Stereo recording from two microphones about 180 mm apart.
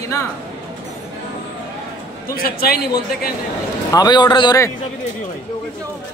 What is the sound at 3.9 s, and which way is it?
Speech, 25° left (ahead or behind).